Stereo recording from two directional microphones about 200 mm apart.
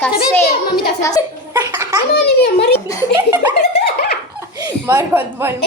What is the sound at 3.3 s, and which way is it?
Speech, 10° right (ahead or behind).